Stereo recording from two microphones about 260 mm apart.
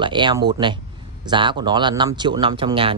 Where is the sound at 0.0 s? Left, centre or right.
Centre.